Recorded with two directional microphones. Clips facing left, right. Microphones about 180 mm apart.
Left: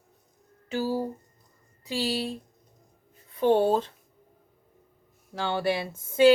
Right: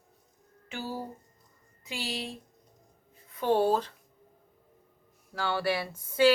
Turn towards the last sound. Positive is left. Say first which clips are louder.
# left 4 dB
turn(degrees=25)  # may be behind; listen again after turning